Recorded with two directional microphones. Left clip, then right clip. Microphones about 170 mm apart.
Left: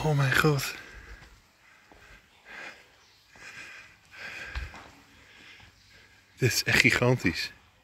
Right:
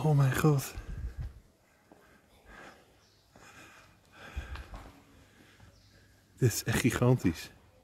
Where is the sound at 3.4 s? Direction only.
35° right (ahead or behind).